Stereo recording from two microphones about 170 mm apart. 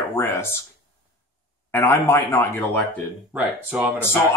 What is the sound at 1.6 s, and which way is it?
A man's voice, 15° left (ahead or behind).